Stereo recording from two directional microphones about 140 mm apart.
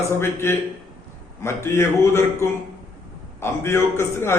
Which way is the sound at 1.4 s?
20° left (ahead or behind).